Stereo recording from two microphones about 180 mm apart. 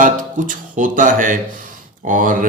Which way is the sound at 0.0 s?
45° right (ahead or behind).